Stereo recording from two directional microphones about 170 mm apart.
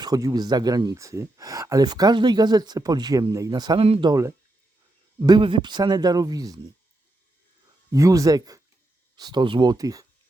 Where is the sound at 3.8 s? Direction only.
35° right (ahead or behind).